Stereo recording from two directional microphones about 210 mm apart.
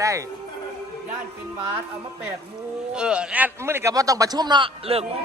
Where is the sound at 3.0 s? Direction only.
5° right (ahead or behind).